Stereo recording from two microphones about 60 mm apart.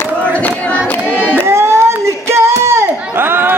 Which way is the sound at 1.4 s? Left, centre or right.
Right.